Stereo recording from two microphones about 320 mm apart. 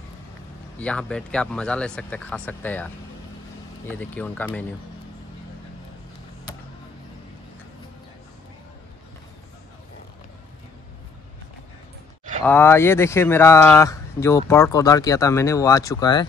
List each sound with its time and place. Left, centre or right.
0.7 s speech: centre
12.4 s speech: centre